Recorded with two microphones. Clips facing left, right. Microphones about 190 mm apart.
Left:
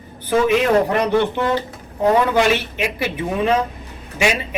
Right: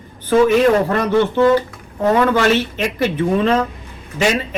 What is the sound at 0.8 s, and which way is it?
A man's voice, 15° left (ahead or behind).